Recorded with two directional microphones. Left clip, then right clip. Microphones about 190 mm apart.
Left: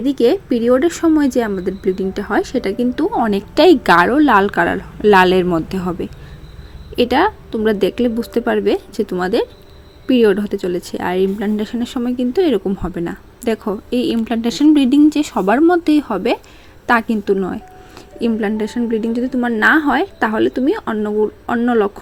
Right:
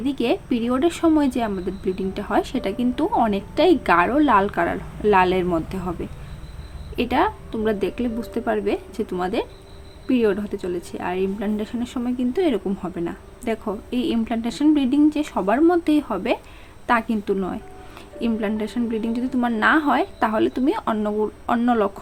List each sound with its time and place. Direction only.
0.0 s a woman's voice: 20° left (ahead or behind)